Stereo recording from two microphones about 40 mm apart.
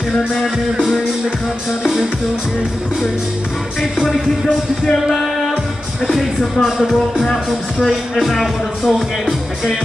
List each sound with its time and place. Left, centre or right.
5.0 s music: centre
6.6 s music: centre